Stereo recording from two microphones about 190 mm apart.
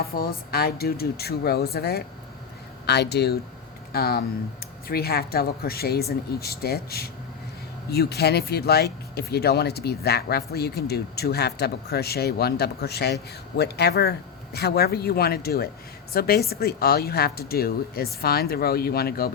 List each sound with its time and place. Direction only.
0.0 s a woman's voice: 50° left (ahead or behind)